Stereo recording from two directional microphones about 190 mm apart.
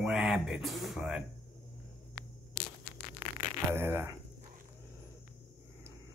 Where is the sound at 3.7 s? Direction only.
15° right (ahead or behind).